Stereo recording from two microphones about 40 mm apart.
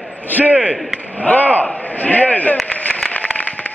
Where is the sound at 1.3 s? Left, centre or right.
Left.